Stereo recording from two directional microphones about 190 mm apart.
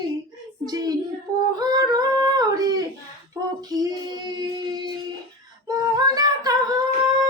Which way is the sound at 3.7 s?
20° right (ahead or behind).